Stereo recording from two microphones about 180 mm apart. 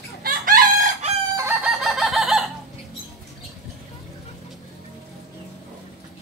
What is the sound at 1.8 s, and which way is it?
Chicken, centre (ahead or behind).